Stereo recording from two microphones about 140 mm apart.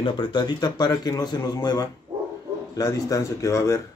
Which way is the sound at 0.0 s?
35° left (ahead or behind).